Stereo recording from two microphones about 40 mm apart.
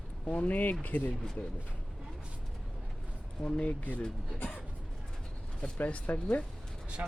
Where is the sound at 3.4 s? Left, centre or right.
Left.